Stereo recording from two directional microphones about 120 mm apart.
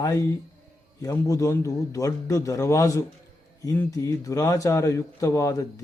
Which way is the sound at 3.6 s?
15° left (ahead or behind).